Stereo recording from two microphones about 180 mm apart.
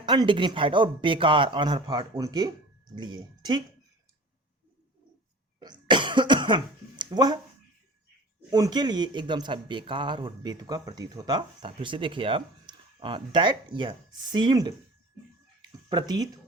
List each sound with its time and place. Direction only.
0.0 s speech: 25° right (ahead or behind)
5.5 s cough: 25° right (ahead or behind)
7.0 s speech: 25° right (ahead or behind)
8.4 s speech: 20° right (ahead or behind)
15.9 s speech: 25° right (ahead or behind)